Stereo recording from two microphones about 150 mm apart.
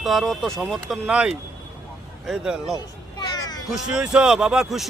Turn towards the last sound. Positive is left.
turn(degrees=-5)  # may be behind; listen again after turning